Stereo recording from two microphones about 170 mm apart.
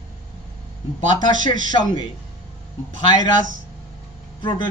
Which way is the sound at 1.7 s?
25° left (ahead or behind).